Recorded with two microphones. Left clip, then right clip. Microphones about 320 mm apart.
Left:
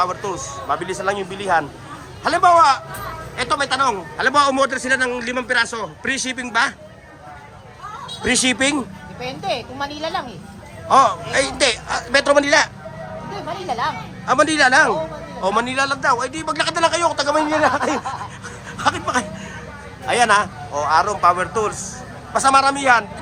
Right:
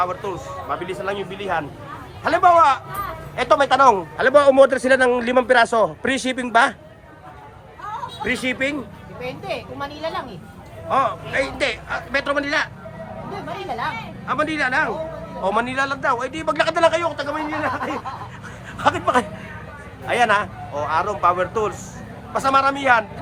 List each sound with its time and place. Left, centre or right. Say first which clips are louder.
0.0 s a man's voice: left 2 dB; centre
8.2 s a man's voice: left 5 dB; centre
9.2 s speech: left 4 dB; left
10.8 s a man's voice: left 6 dB; centre
14.3 s a man's voice: left 7 dB; centre